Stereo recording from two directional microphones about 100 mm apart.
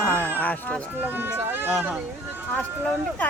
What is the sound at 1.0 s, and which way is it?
Speech, 20° right (ahead or behind).